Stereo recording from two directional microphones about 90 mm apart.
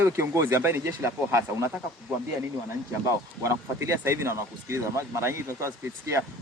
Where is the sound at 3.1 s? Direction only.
30° right (ahead or behind).